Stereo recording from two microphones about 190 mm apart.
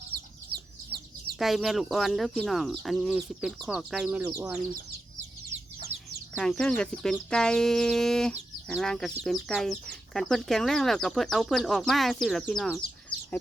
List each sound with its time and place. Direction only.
0.1 s chicken: 55° right (ahead or behind)
1.4 s speech: centre (ahead or behind)
5.9 s bird: 10° right (ahead or behind)
6.3 s speech: 5° left (ahead or behind)
13.1 s chicken: 25° left (ahead or behind)